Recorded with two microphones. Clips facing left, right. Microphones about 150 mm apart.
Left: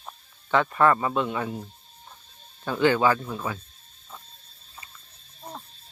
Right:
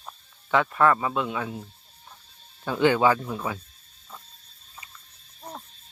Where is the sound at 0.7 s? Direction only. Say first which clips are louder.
Left 1 dB; centre (ahead or behind).